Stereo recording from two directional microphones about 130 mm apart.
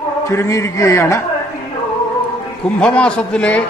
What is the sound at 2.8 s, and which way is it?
Speech, 10° left (ahead or behind).